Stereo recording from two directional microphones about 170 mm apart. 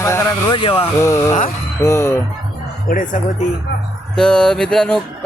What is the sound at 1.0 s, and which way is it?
Speech, 15° left (ahead or behind).